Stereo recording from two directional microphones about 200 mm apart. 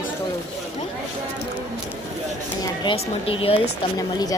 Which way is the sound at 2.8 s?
25° left (ahead or behind).